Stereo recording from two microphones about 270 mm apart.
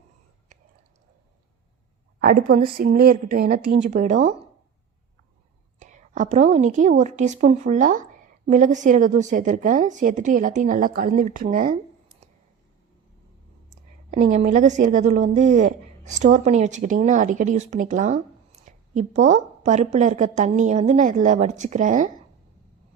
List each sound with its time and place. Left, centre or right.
2.2 s a woman's voice: right
5.8 s a woman's voice: right
14.1 s a woman's voice: right